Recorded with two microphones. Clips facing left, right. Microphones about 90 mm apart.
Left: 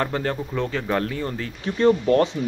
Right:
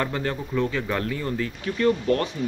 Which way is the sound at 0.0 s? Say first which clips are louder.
Left 2 dB; 35° left (ahead or behind).